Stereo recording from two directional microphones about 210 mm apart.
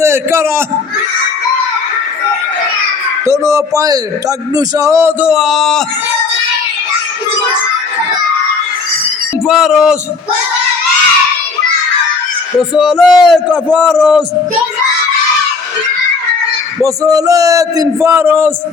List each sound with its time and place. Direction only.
0.0 s a man's voice: 10° right (ahead or behind)
3.2 s a man's voice: 15° right (ahead or behind); by 5.8 s centre (ahead or behind)
9.5 s a man's voice: centre (ahead or behind)
12.5 s a man's voice: centre (ahead or behind)
16.8 s a man's voice: 15° right (ahead or behind)